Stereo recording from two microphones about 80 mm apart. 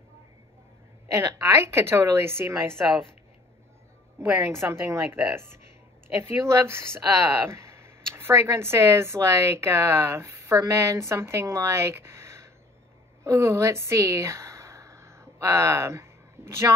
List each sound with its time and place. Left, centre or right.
1.1 s speech: right
2.8 s speech: centre
4.4 s speech: right
13.2 s a sound: right